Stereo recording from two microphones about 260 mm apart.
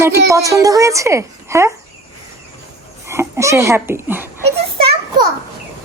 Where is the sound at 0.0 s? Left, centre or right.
Centre.